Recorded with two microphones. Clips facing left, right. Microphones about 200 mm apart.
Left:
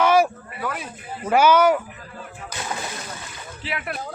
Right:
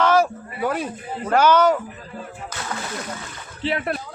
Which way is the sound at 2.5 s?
15° left (ahead or behind).